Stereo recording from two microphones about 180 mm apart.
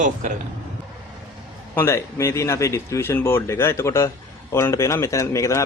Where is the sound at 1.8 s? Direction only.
15° left (ahead or behind).